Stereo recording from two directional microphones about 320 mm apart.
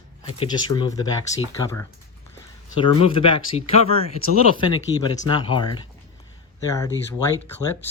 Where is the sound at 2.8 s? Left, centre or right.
Centre.